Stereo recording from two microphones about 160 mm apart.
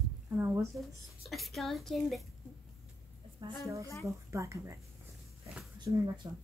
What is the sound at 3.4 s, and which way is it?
Speech, 25° right (ahead or behind).